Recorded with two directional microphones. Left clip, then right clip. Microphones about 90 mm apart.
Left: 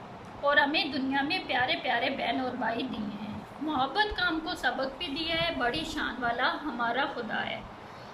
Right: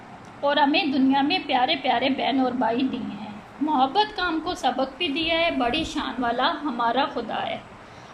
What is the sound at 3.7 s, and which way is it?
A woman's voice, 30° right (ahead or behind).